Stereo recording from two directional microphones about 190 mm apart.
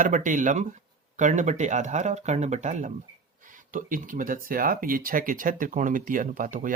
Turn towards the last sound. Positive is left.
turn(degrees=-45)  # may be behind; listen again after turning